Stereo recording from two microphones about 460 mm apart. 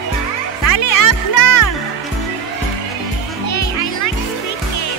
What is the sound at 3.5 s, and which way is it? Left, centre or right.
Children playing, left.